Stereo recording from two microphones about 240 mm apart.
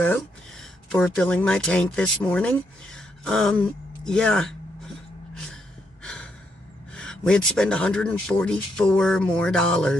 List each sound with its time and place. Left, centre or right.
0.9 s speech: centre
6.9 s speech: centre